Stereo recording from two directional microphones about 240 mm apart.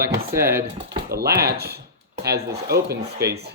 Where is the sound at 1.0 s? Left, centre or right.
Right.